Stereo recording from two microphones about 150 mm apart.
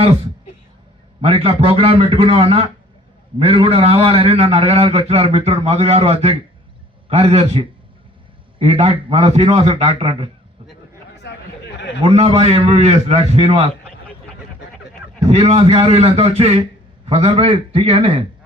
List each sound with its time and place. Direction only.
1.2 s a man's voice: 40° right (ahead or behind)
12.0 s a man's voice: 45° right (ahead or behind)
15.3 s a man's voice: 45° right (ahead or behind)